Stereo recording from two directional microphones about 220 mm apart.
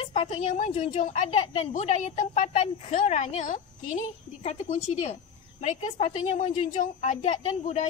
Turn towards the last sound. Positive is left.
turn(degrees=35)  # may be behind; listen again after turning